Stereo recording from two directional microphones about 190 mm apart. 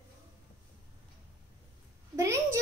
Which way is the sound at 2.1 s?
15° right (ahead or behind).